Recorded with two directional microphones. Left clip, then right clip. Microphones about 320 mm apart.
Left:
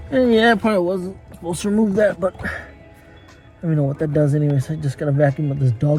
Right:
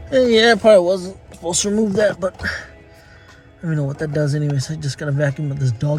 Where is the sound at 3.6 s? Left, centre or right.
Centre.